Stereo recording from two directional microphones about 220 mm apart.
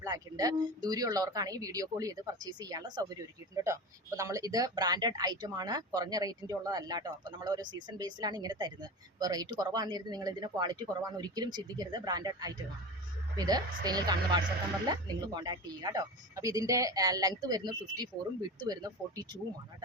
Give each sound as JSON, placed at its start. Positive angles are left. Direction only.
{"t": 0.0, "sound": "speech", "side_deg": -15}